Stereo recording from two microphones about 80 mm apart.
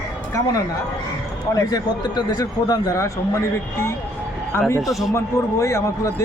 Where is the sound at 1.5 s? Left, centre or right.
Left.